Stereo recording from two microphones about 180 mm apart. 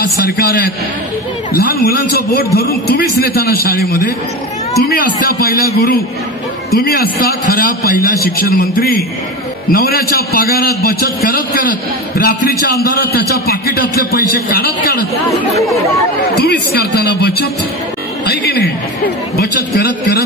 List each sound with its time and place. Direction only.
0.2 s a man's voice: 60° left (ahead or behind)
16.3 s a man's voice: 60° left (ahead or behind)